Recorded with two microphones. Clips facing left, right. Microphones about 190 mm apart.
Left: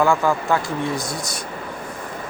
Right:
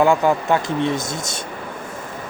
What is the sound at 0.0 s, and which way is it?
Speech, 20° right (ahead or behind).